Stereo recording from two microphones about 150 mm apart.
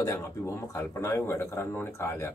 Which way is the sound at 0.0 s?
20° left (ahead or behind).